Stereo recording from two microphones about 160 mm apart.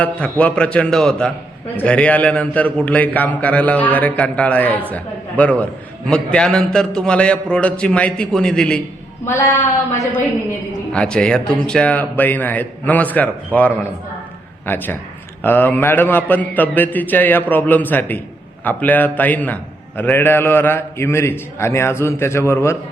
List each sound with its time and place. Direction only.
0.0 s a man's voice: 10° left (ahead or behind)
9.2 s a woman's voice: 15° left (ahead or behind)
10.9 s a man's voice: 5° left (ahead or behind)